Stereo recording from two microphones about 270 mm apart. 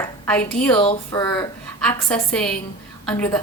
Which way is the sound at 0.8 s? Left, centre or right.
Centre.